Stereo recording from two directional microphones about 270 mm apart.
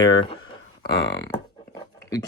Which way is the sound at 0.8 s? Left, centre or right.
Left.